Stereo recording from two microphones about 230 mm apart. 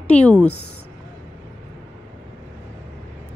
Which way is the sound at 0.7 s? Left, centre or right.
Left.